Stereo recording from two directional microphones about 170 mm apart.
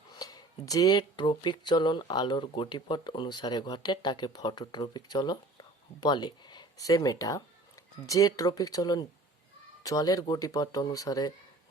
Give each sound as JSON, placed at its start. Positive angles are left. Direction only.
{"t": 0.1, "sound": "speech", "side_deg": 20}